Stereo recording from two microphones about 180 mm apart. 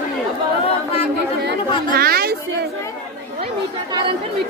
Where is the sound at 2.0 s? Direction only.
60° right (ahead or behind).